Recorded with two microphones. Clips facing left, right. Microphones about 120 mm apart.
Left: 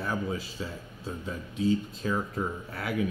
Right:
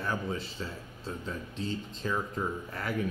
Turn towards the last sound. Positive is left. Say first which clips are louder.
# left 2 dB
turn(degrees=5)  # may be behind; listen again after turning